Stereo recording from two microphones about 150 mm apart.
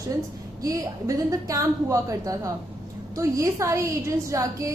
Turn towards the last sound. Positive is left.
turn(degrees=-20)  # may be behind; listen again after turning